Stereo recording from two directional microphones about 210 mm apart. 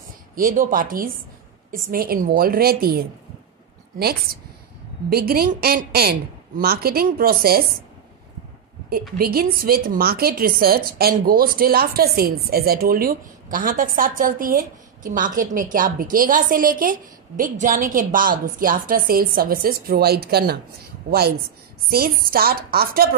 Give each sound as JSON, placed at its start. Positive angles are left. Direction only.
{"t": 0.4, "sound": "a woman's voice", "side_deg": -40}
{"t": 9.2, "sound": "a woman's voice", "side_deg": -45}
{"t": 21.9, "sound": "a woman's voice", "side_deg": -45}